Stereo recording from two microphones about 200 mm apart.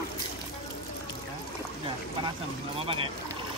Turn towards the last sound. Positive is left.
turn(degrees=-25)  # may be behind; listen again after turning